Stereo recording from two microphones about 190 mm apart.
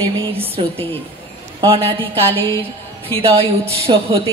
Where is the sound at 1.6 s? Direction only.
30° right (ahead or behind).